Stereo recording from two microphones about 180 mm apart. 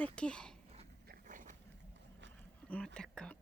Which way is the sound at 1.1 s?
45° right (ahead or behind).